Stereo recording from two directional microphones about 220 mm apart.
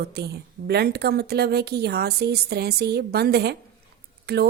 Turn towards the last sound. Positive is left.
turn(degrees=-45)  # may be behind; listen again after turning